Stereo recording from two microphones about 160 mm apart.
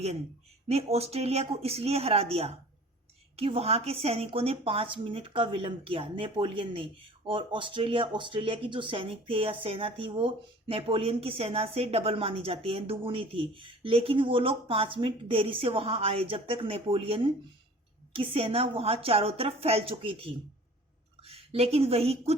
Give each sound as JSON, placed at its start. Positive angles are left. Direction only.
{"t": 0.7, "sound": "a woman's voice", "side_deg": -40}